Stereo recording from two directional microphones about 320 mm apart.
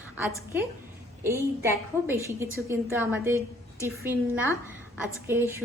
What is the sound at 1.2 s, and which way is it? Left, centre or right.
A woman's voice, centre.